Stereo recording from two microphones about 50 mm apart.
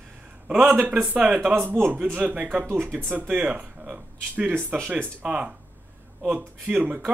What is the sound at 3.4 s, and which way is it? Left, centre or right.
A man's voice, right.